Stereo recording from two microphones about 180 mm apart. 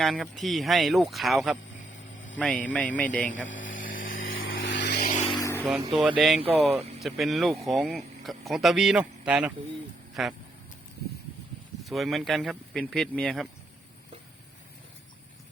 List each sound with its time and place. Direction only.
0.0 s a man's voice: centre (ahead or behind)
3.8 s vehicle: 90° left; by 5.0 s 70° left (ahead or behind)
5.2 s vehicle: 25° left (ahead or behind)
5.9 s speech: centre (ahead or behind)
11.8 s speech: centre (ahead or behind)